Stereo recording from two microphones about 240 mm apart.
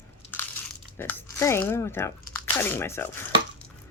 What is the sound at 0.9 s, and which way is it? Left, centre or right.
Speech, centre.